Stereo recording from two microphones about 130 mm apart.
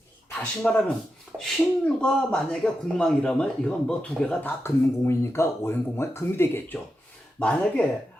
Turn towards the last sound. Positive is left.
turn(degrees=10)  # may be behind; listen again after turning